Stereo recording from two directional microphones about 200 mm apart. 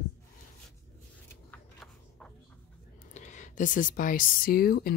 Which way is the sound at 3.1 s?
40° left (ahead or behind).